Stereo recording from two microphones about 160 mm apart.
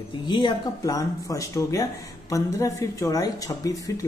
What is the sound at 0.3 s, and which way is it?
Speech, 30° left (ahead or behind).